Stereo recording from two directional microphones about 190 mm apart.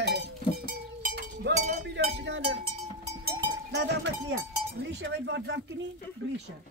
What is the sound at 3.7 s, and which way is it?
Cowbell, 65° right (ahead or behind).